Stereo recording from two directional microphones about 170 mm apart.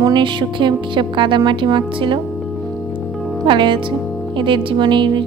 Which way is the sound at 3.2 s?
Centre (ahead or behind).